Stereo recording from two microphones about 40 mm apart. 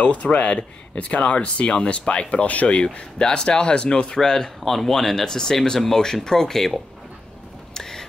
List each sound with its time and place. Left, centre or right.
0.0 s speech: left
2.5 s speech: left
2.8 s speech: centre
4.1 s speech: centre
7.7 s rain: centre